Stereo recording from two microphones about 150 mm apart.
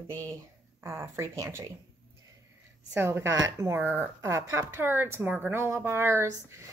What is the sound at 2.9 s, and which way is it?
Speech, 15° right (ahead or behind).